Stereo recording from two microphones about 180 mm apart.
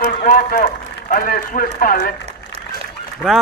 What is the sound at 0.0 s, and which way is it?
A man's voice, 50° left (ahead or behind).